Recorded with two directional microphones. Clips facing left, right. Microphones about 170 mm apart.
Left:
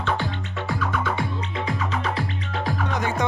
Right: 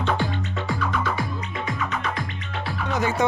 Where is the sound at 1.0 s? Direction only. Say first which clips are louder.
Left 1 dB; 25° left (ahead or behind).